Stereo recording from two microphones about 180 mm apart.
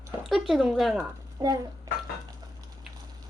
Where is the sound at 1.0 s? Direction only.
20° right (ahead or behind).